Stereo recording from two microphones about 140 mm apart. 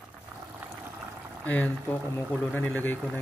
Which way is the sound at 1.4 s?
10° left (ahead or behind).